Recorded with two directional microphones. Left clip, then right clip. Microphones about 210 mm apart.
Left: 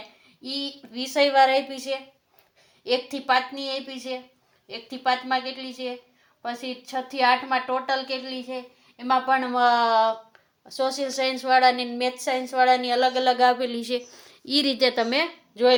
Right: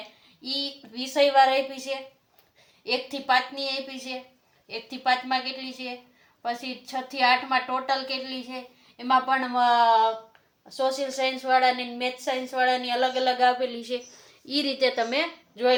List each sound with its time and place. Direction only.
0.4 s a woman's voice: 35° left (ahead or behind)